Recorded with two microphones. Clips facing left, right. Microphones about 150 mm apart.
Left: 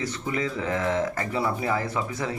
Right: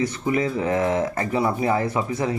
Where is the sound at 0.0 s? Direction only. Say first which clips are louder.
Right 6 dB; 20° right (ahead or behind).